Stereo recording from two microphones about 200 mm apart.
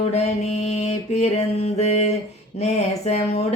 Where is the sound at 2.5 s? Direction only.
35° left (ahead or behind).